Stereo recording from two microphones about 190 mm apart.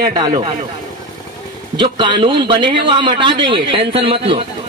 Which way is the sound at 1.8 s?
25° right (ahead or behind).